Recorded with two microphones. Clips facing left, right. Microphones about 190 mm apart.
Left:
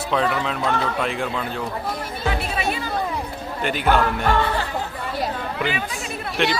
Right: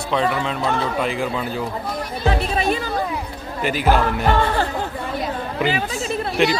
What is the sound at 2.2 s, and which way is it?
Music, 40° right (ahead or behind).